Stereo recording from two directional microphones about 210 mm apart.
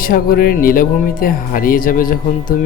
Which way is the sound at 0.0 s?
45° left (ahead or behind).